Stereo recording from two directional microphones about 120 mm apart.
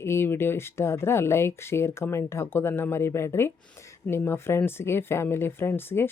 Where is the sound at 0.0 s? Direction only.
20° left (ahead or behind).